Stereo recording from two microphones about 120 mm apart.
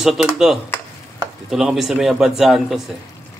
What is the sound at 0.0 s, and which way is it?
Speech, centre (ahead or behind).